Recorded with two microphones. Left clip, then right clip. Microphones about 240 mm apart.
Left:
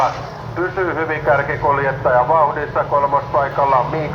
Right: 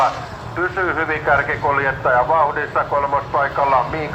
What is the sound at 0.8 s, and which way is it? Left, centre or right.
A man's voice, right.